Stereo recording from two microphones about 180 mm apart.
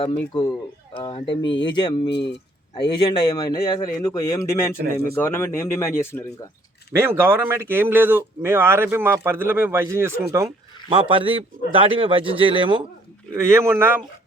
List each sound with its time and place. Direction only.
0.3 s a man's voice: 35° left (ahead or behind)
2.0 s speech: 70° left (ahead or behind)
2.7 s a man's voice: 25° left (ahead or behind)
6.9 s speech: 15° right (ahead or behind)
10.8 s a man's voice: 30° right (ahead or behind)
13.3 s speech: 15° right (ahead or behind)